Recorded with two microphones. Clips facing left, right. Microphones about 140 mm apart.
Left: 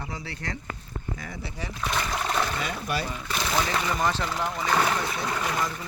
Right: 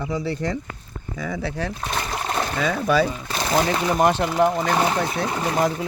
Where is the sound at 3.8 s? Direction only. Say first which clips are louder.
Right 8 dB; 60° right (ahead or behind).